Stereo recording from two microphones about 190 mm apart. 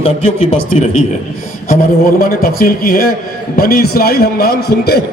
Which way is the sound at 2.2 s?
50° left (ahead or behind).